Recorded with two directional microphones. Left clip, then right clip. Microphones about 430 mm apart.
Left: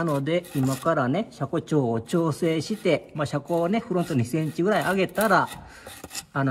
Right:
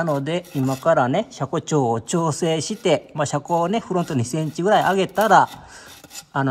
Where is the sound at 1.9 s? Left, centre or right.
Centre.